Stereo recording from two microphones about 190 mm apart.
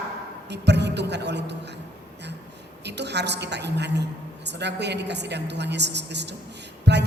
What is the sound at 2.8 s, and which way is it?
A man's voice, 65° right (ahead or behind).